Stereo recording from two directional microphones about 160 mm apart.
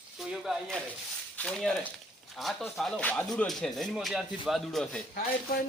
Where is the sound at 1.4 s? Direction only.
5° left (ahead or behind).